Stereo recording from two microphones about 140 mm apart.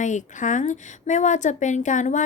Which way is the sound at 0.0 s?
60° left (ahead or behind).